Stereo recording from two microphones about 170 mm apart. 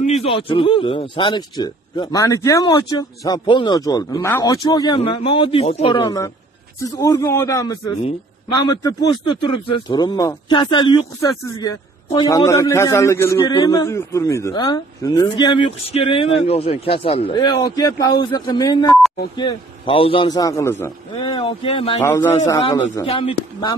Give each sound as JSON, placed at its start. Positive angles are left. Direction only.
{"t": 0.0, "sound": "speech", "side_deg": 35}
{"t": 6.0, "sound": "speech", "side_deg": 20}
{"t": 21.1, "sound": "speech", "side_deg": 30}
{"t": 22.0, "sound": "a man's voice", "side_deg": 15}
{"t": 23.0, "sound": "speech", "side_deg": 35}